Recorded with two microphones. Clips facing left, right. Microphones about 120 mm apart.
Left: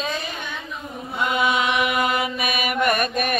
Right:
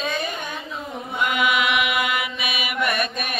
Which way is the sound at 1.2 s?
30° left (ahead or behind).